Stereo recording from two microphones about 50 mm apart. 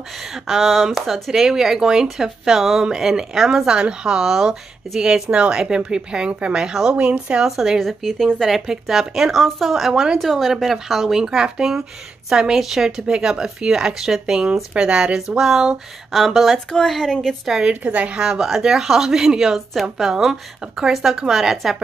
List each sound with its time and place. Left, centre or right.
0.3 s speech: centre; by 7.4 s right
7.4 s speech: centre
7.8 s speech: centre
11.2 s speech: centre
16.5 s a woman's voice: centre
17.5 s speech: centre
17.8 s speech: right
18.2 s speech: centre